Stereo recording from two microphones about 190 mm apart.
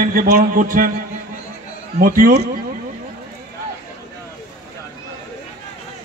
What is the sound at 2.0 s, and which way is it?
Speech, 50° right (ahead or behind).